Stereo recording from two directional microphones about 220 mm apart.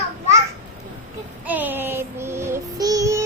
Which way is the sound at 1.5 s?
10° right (ahead or behind).